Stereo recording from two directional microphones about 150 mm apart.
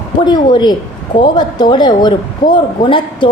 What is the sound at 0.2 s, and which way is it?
A woman's voice, 30° left (ahead or behind).